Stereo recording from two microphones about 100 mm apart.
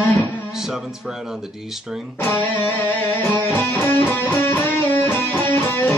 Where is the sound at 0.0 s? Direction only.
15° left (ahead or behind).